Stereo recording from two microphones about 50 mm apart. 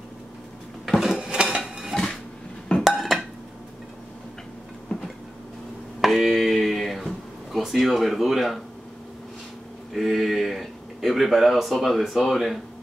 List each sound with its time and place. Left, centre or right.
1.0 s dishes: centre
2.8 s dishes: centre
4.9 s train: left
5.9 s a sound: centre
9.9 s speech: centre